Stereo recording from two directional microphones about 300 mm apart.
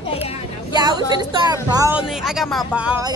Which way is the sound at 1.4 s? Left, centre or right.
Centre.